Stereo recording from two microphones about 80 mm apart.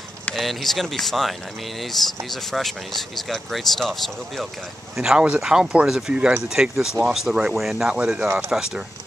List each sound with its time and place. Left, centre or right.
0.3 s speech: centre
2.5 s speech: centre
4.9 s speech: centre